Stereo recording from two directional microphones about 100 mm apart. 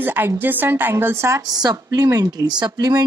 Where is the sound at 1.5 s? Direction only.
40° right (ahead or behind).